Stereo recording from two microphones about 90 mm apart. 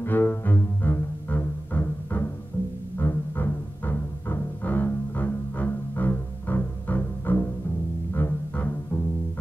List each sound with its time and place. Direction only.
0.0 s cello: 25° left (ahead or behind)
3.0 s music: 25° left (ahead or behind)